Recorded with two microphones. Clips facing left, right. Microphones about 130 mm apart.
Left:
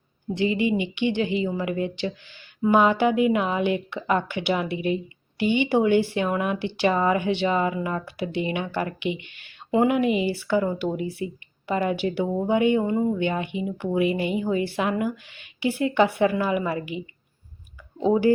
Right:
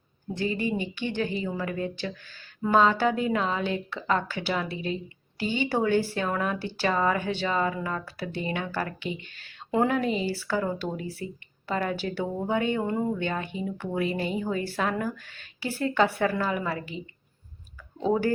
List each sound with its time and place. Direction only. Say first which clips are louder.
0.3 s a woman's voice: left 5 dB; 15° left (ahead or behind)
5.7 s a woman's voice: left 3 dB; 15° left (ahead or behind)
9.2 s speech: even; 40° right (ahead or behind)
9.7 s a woman's voice: left 4 dB; 15° left (ahead or behind)
13.1 s a woman's voice: left 5 dB; 15° left (ahead or behind)